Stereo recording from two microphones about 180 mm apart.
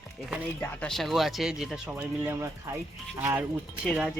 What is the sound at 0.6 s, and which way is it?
A man's voice, 5° left (ahead or behind).